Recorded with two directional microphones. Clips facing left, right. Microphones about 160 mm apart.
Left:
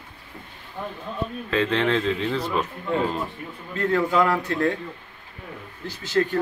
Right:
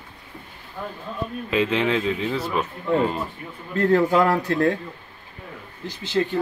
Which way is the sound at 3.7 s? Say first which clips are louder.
Right 4 dB; 35° right (ahead or behind).